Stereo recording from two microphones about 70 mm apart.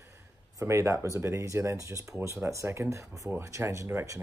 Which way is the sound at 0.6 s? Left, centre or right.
Right.